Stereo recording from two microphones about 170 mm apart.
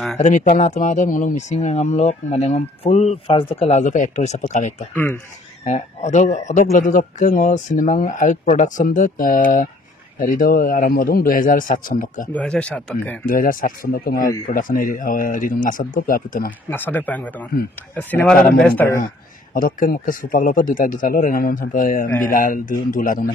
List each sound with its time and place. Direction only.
0.2 s speech: 40° left (ahead or behind)
12.3 s speech: 5° left (ahead or behind)
13.2 s speech: 55° left (ahead or behind)
16.7 s speech: 10° left (ahead or behind)
19.5 s speech: 55° left (ahead or behind)